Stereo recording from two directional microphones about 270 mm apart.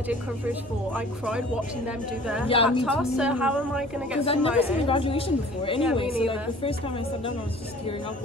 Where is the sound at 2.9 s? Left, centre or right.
Centre.